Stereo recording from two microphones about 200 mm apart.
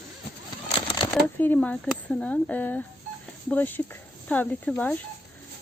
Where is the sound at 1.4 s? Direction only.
10° left (ahead or behind).